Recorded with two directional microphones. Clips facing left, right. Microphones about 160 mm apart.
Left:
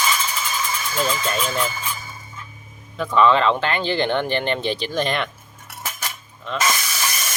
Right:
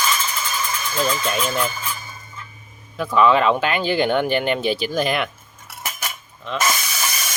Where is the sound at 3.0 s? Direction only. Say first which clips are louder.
Right 1 dB; 5° right (ahead or behind).